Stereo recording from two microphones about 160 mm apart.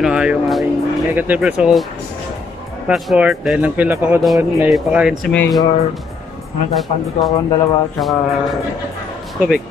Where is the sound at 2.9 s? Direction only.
5° right (ahead or behind).